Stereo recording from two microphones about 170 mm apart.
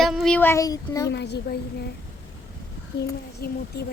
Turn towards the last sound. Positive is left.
turn(degrees=65)  # may be behind; listen again after turning